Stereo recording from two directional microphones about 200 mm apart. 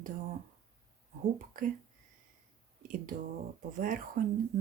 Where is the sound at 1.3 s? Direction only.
45° right (ahead or behind).